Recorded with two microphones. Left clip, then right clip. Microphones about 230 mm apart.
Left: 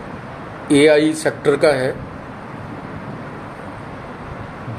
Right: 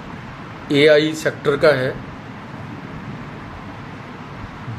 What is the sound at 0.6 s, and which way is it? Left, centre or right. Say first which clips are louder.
Speech: left 1 dB; left.